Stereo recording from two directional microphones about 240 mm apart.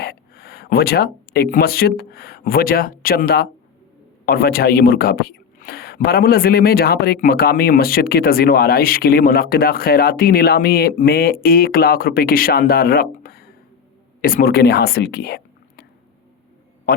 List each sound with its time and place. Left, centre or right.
0.0 s speech: left